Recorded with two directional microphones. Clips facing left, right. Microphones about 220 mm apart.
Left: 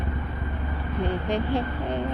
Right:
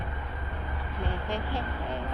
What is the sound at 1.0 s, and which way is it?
Vehicle, 20° left (ahead or behind).